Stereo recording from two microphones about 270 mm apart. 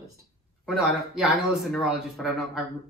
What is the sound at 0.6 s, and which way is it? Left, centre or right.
A man's voice, centre.